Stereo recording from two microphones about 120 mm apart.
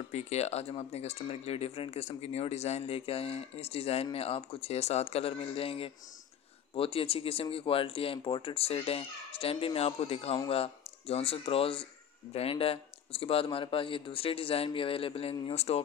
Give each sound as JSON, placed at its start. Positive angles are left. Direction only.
{"t": 0.1, "sound": "speech", "side_deg": 65}
{"t": 15.5, "sound": "speech", "side_deg": 60}